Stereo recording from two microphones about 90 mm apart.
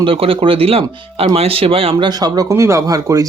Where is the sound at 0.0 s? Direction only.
85° right.